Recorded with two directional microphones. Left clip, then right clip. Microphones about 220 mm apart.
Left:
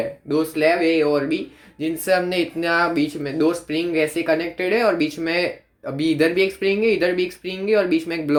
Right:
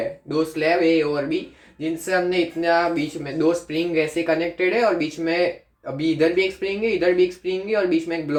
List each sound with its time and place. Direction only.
0.3 s speech: 45° left (ahead or behind)